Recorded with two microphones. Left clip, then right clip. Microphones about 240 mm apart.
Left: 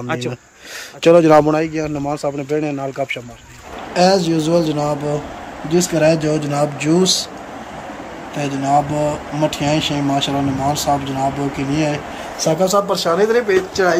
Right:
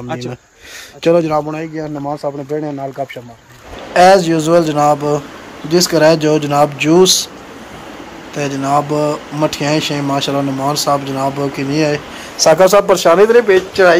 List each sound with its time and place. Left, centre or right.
1.0 s speech: centre
8.4 s speech: centre
12.7 s speech: right
13.2 s speech: right